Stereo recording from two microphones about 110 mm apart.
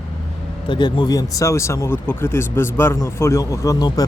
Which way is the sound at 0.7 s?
45° left (ahead or behind).